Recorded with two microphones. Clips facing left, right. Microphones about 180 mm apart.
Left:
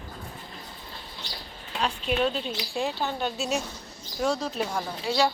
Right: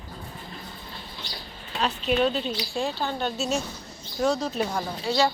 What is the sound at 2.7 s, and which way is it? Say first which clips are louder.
Speech: left 1 dB; 15° left (ahead or behind).